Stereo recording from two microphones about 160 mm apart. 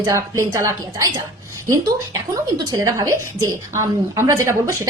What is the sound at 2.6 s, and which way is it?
A woman's voice, 20° right (ahead or behind).